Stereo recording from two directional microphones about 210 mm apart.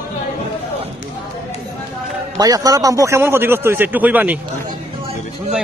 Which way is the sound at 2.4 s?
15° right (ahead or behind).